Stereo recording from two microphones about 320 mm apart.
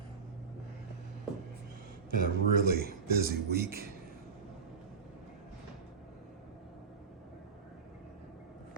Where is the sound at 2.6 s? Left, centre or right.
Right.